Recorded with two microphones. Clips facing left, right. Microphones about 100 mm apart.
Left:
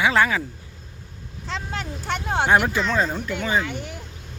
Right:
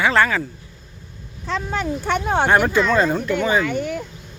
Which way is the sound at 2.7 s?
55° right (ahead or behind).